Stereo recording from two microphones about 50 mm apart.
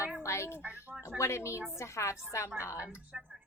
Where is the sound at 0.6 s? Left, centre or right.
Right.